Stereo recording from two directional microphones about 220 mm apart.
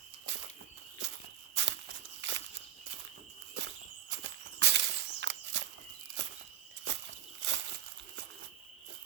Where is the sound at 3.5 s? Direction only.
55° right (ahead or behind).